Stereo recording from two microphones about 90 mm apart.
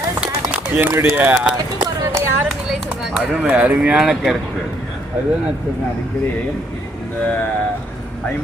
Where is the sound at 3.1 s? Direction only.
10° right (ahead or behind).